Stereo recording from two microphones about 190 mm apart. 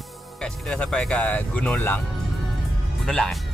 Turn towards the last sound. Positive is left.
turn(degrees=0)  # may be behind; listen again after turning